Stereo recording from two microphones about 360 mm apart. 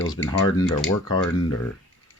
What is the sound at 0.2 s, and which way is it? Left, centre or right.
Rub, left.